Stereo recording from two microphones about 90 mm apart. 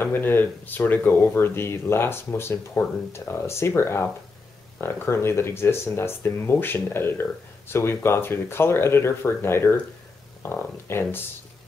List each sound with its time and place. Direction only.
0.0 s speech: 25° left (ahead or behind)